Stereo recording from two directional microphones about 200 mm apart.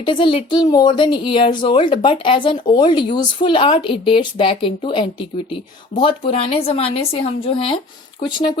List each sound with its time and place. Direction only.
0.0 s speech: 25° left (ahead or behind)